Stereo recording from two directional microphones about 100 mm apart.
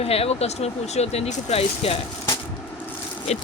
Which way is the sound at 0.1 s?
85° left.